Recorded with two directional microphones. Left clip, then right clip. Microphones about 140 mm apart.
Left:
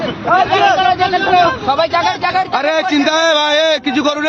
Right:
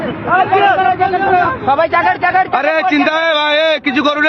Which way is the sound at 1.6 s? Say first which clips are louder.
Right 2 dB; 35° right (ahead or behind).